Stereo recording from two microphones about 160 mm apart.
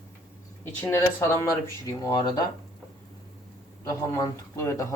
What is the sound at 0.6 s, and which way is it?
Speech, 10° left (ahead or behind).